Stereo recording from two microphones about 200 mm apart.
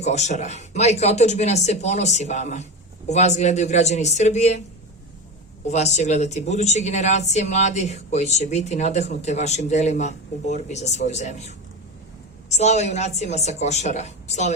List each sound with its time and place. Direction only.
0.0 s speech: 35° left (ahead or behind)
5.6 s speech: 35° left (ahead or behind)